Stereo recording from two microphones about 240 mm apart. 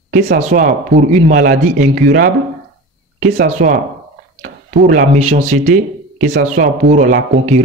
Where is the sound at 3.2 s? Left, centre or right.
Right.